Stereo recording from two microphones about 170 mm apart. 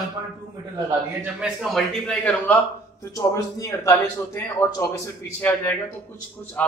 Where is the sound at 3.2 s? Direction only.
20° left (ahead or behind).